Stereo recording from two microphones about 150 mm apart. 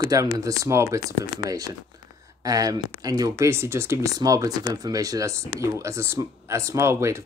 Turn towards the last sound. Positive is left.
turn(degrees=-20)  # may be behind; listen again after turning